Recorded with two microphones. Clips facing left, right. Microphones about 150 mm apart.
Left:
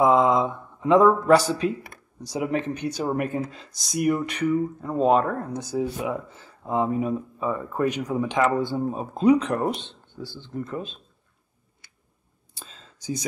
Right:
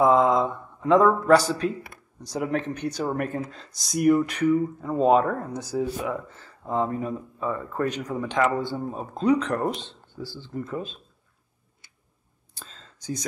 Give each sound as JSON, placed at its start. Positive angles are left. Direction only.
{"t": 0.0, "sound": "a sound", "side_deg": 0}
{"t": 2.2, "sound": "speech", "side_deg": 5}
{"t": 12.5, "sound": "whispering", "side_deg": 5}